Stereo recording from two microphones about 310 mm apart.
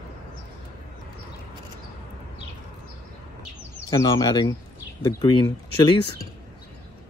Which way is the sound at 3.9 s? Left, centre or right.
Centre.